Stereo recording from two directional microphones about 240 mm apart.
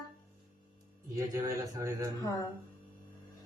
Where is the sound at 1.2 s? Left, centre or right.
Centre.